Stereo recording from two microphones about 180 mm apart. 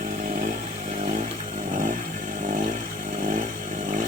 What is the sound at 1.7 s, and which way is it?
Chainsaw, 50° right (ahead or behind).